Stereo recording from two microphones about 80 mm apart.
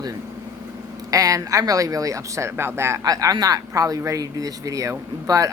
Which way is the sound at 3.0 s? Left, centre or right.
Right.